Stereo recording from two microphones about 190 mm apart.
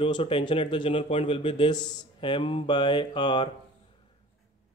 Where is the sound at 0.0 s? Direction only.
30° left (ahead or behind).